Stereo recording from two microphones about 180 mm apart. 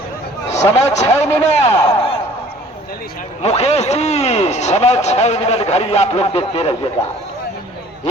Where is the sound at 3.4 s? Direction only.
35° left (ahead or behind).